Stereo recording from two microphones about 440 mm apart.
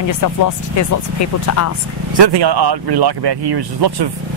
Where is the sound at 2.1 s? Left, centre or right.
Right.